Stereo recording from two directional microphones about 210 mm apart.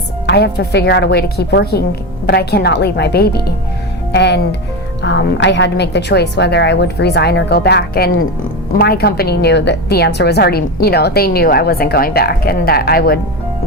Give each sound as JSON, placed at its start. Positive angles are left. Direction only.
{"t": 0.3, "sound": "a woman's voice", "side_deg": 50}